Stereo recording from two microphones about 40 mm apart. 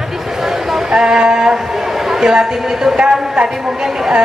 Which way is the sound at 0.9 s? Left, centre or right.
Centre.